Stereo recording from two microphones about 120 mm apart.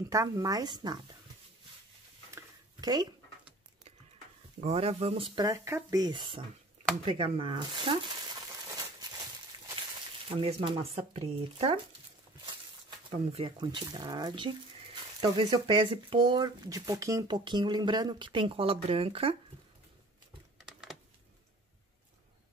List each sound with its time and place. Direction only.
0.1 s speech: 30° right (ahead or behind)
2.3 s a sound: 35° right (ahead or behind)
4.6 s speech: 60° right (ahead or behind)
5.4 s speech: 25° right (ahead or behind); by 8.2 s 40° right (ahead or behind)
10.3 s speech: 50° right (ahead or behind)
13.1 s speech: 55° right (ahead or behind)
13.6 s speech: 40° right (ahead or behind)